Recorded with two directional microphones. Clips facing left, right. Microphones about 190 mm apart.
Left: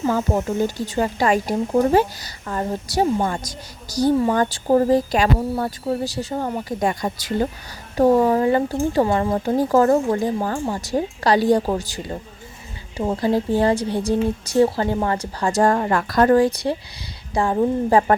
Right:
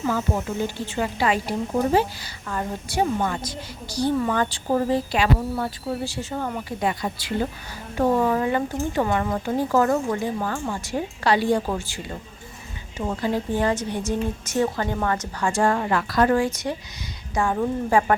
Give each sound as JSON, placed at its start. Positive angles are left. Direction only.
{"t": 0.1, "sound": "a woman's voice", "side_deg": 40}
{"t": 13.6, "sound": "speech", "side_deg": 35}